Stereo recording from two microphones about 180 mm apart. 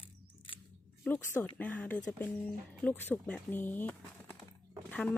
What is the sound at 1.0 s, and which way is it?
Speech, 10° left (ahead or behind).